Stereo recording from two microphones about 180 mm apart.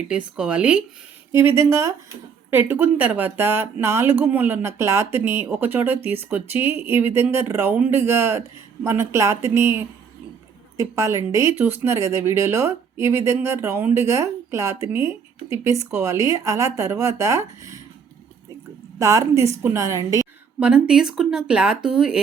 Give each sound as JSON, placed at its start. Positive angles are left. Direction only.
{"t": 0.3, "sound": "speech", "side_deg": -5}
{"t": 18.9, "sound": "speech", "side_deg": -20}
{"t": 20.6, "sound": "speech", "side_deg": -5}